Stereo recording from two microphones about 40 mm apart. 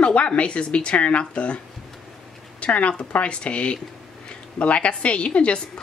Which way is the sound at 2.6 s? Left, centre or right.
Left.